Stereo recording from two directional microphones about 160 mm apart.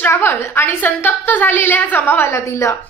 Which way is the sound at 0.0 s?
15° left (ahead or behind).